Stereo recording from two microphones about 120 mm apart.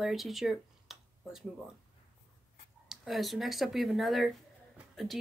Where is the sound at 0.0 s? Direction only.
Centre (ahead or behind).